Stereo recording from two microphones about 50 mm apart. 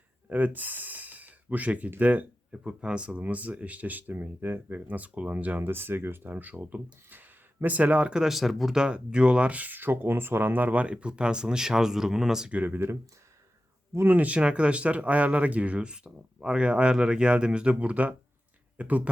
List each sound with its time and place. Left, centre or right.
0.3 s gasp: right
2.0 s speech: right
2.6 s speech: right
5.6 s speech: right
6.3 s speech: right
8.2 s speech: centre
8.7 s speech: centre
12.5 s speech: right
14.1 s speech: right
16.0 s speech: centre; by 19.0 s right